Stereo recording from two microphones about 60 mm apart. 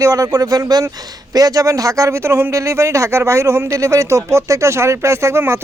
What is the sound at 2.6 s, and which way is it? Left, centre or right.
Speech, right.